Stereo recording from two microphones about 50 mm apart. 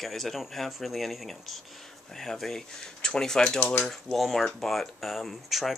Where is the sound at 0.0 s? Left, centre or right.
Centre.